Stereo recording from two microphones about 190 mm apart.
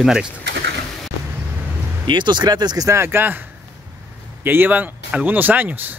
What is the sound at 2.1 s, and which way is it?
Speech, 25° right (ahead or behind).